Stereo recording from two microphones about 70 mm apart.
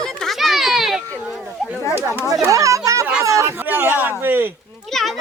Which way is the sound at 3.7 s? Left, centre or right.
Right.